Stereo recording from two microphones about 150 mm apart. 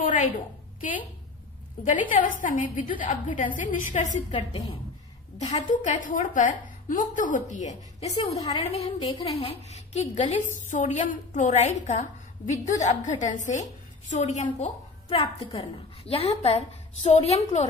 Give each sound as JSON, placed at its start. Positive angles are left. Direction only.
{"t": 0.0, "sound": "a sound", "side_deg": 60}
{"t": 0.7, "sound": "a woman's voice", "side_deg": 60}
{"t": 5.5, "sound": "a woman's voice", "side_deg": 60}
{"t": 8.5, "sound": "a woman's voice", "side_deg": 40}
{"t": 15.0, "sound": "a woman's voice", "side_deg": 40}